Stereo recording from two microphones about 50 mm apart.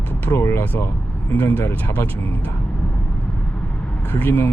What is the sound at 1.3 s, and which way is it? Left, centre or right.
Speech, left.